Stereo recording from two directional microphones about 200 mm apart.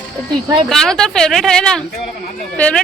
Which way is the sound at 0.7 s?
Centre (ahead or behind).